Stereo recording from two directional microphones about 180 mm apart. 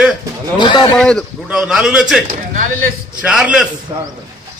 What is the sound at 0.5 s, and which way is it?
Speech, 25° left (ahead or behind).